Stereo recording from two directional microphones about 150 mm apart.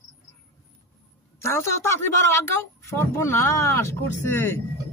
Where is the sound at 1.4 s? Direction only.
15° left (ahead or behind).